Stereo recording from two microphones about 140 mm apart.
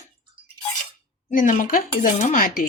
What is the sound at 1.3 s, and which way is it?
Speech, 65° left (ahead or behind).